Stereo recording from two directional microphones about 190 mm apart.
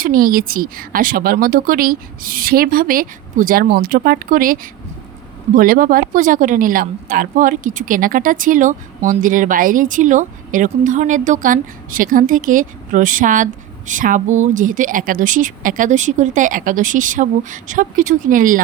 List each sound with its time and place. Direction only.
0.0 s speech: 50° right (ahead or behind)